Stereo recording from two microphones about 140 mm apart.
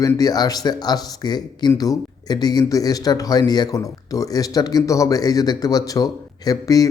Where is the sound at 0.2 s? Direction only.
25° left (ahead or behind).